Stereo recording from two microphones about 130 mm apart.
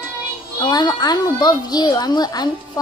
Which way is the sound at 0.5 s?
35° left (ahead or behind).